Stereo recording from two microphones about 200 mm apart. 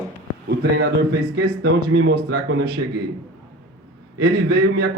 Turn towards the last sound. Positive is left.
turn(degrees=-50)  # may be behind; listen again after turning